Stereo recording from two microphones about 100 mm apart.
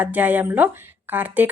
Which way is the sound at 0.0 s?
15° right (ahead or behind).